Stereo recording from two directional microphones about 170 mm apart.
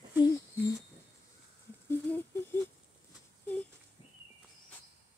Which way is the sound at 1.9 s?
15° left (ahead or behind).